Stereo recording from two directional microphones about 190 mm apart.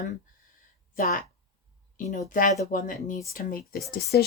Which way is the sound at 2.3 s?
45° left (ahead or behind).